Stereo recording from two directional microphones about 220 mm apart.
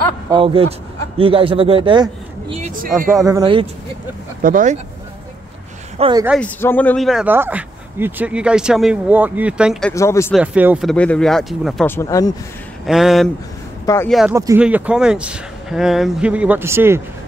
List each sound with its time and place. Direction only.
0.3 s speech: 25° right (ahead or behind)
2.5 s a sound: 35° right (ahead or behind)
3.3 s speech: 20° right (ahead or behind)
4.4 s speech: 40° right (ahead or behind)
5.9 s speech: 20° right (ahead or behind)
6.4 s speech: 10° left (ahead or behind)
9.9 s speech: 10° left (ahead or behind)
10.3 s speech: 5° right (ahead or behind)
11.9 s speech: 15° left (ahead or behind)
12.8 s speech: centre (ahead or behind)
13.8 s speech: 10° left (ahead or behind)
14.3 s speech: 10° right (ahead or behind)